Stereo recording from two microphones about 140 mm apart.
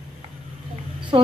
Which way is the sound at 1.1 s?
35° right (ahead or behind).